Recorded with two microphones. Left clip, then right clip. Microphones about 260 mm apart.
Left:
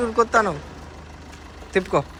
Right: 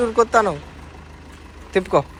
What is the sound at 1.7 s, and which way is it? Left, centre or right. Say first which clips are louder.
Speech: right 3 dB; centre.